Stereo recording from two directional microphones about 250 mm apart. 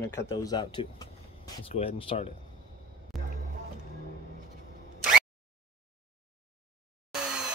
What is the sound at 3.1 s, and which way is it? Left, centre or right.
Music, centre.